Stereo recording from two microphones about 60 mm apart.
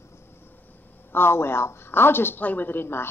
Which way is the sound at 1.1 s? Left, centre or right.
Left.